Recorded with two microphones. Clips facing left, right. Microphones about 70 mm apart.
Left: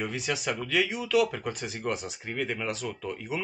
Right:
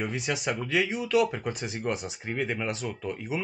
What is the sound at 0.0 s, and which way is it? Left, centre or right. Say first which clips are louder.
Speech: right 1 dB; centre.